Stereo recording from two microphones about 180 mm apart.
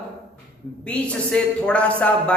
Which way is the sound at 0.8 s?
5° left (ahead or behind).